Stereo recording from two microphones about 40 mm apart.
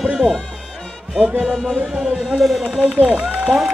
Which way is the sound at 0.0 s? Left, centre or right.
Centre.